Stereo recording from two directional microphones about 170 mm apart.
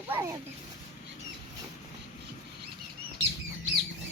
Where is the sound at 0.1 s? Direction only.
15° right (ahead or behind).